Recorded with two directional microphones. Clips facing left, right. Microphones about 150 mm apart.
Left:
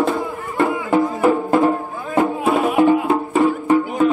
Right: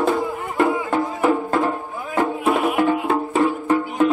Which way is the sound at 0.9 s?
10° left (ahead or behind).